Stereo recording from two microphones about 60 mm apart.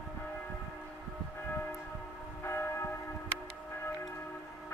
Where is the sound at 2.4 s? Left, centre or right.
Left.